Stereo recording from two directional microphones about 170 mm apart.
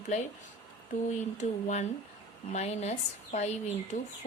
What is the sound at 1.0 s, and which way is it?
Speech, 45° left (ahead or behind).